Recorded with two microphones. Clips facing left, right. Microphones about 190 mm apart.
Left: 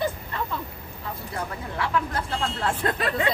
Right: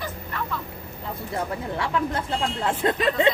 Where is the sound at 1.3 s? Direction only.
25° right (ahead or behind).